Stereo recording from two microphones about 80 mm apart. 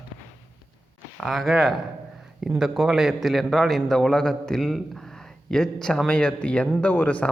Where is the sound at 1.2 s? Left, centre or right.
Centre.